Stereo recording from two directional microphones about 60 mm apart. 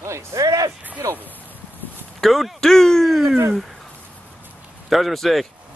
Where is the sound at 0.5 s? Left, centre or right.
Right.